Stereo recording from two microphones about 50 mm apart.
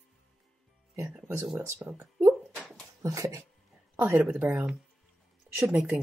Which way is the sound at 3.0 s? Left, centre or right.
Right.